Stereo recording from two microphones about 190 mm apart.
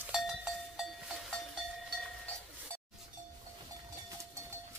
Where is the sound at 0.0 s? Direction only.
5° right (ahead or behind).